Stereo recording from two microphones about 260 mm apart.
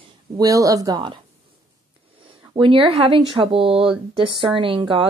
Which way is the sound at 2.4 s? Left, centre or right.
Centre.